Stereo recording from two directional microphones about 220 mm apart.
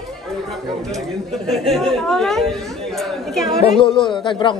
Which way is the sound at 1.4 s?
Centre (ahead or behind).